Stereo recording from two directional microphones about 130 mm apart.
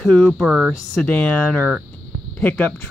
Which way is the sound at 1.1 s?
10° left (ahead or behind).